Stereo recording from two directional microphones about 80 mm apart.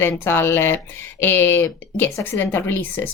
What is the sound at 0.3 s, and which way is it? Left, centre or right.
A woman's voice, left.